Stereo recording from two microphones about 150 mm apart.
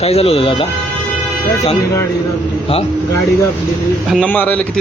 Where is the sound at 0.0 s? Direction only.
40° left (ahead or behind).